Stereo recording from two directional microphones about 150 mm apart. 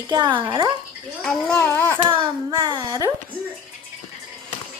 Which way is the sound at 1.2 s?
5° left (ahead or behind).